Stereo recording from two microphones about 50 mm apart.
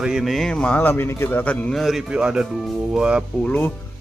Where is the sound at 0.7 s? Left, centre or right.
Left.